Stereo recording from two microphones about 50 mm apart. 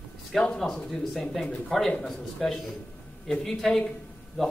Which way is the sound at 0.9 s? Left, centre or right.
Centre.